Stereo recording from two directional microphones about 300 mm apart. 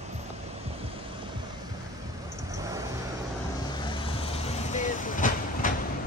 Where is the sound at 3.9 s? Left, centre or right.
Centre.